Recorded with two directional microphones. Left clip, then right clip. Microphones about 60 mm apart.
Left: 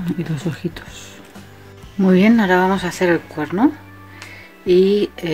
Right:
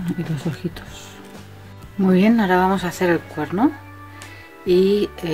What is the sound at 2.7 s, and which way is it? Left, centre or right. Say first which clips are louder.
Speech: left 2 dB; centre.